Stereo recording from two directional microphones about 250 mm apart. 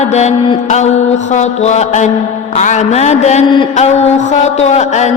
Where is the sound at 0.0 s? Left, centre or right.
Left.